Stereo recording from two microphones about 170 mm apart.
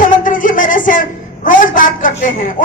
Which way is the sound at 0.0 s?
50° left (ahead or behind).